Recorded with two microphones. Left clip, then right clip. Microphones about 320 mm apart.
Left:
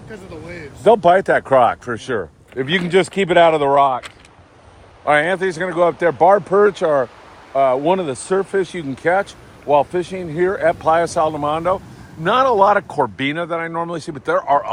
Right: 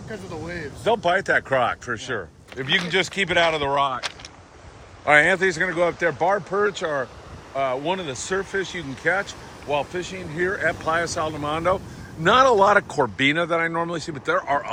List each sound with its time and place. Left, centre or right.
0.1 s speech: centre
1.0 s speech: centre
5.0 s speech: centre